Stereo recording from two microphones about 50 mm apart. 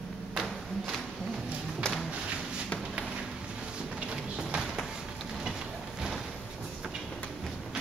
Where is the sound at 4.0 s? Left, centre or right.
Centre.